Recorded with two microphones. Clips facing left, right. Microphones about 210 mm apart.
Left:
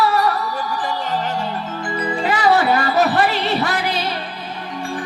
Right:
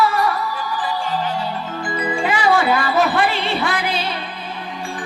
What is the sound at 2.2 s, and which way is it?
Music, 40° left (ahead or behind).